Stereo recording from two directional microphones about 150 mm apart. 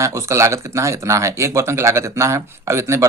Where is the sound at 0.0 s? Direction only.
20° right (ahead or behind).